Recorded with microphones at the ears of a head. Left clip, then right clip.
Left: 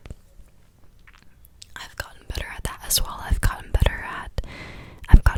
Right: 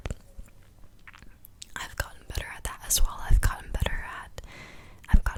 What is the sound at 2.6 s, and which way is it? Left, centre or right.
Whispering, left.